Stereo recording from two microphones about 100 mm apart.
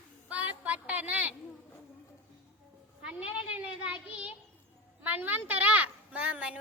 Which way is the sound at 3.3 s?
65° left (ahead or behind).